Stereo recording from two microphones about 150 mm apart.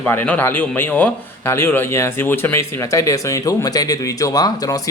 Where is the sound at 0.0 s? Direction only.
10° left (ahead or behind).